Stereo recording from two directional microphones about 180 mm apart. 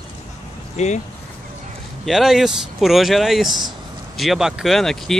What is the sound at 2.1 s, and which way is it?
Speech, centre (ahead or behind).